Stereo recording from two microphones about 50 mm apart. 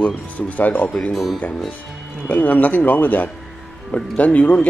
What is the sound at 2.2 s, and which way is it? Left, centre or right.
Speech, left.